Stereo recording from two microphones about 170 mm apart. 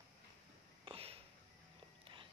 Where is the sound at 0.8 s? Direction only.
35° right (ahead or behind).